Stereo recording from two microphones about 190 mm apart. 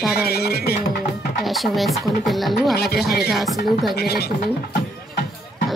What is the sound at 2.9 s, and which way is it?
Music, 60° left (ahead or behind).